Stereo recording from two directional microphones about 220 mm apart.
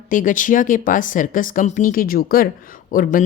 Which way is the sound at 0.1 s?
35° left (ahead or behind).